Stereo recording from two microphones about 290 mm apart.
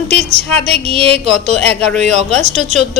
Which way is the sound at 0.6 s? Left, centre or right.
Centre.